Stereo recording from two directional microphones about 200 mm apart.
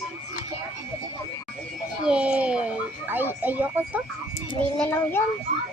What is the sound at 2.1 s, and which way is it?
Speech, 5° right (ahead or behind).